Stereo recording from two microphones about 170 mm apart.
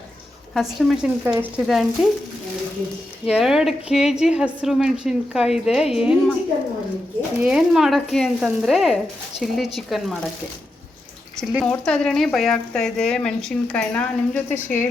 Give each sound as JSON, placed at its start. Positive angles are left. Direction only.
{"t": 0.5, "sound": "speech", "side_deg": 0}
{"t": 3.2, "sound": "speech", "side_deg": -5}
{"t": 11.6, "sound": "speech", "side_deg": 5}